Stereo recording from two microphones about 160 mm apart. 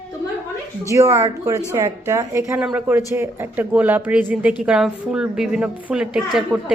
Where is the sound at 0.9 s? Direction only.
20° right (ahead or behind).